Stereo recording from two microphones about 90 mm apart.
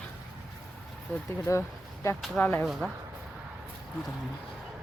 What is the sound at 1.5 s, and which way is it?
Speech, 30° left (ahead or behind).